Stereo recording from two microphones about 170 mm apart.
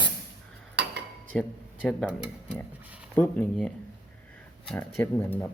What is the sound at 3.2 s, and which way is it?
Speech, 10° left (ahead or behind).